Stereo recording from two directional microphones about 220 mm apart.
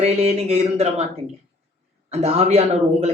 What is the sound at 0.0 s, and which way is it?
A man's voice, 30° right (ahead or behind).